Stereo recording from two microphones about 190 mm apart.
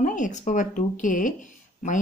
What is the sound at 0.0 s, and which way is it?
Speech, 40° left (ahead or behind).